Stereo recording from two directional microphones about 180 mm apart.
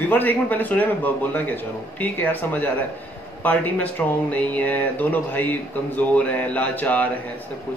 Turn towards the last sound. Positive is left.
turn(degrees=10)  # may be behind; listen again after turning